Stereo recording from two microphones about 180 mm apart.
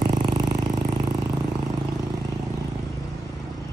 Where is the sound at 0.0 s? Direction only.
25° right (ahead or behind).